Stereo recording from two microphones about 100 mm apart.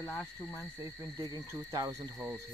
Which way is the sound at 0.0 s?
15° left (ahead or behind).